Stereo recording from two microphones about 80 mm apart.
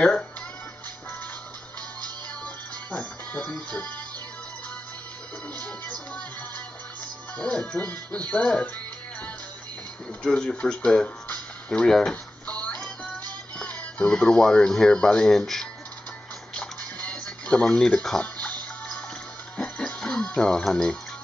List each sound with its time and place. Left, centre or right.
2.4 s music: centre
5.6 s speech: centre
7.3 s speech: centre
10.2 s speech: centre
16.5 s music: centre